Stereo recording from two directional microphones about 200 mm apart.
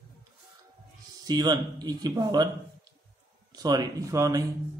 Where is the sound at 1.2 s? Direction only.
20° right (ahead or behind).